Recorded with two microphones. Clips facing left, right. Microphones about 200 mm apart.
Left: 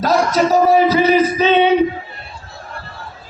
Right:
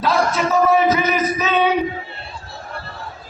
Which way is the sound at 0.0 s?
40° left (ahead or behind).